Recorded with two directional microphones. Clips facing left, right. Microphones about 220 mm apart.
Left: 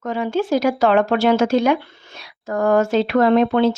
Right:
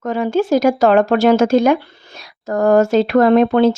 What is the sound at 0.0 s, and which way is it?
Speech, 45° right (ahead or behind).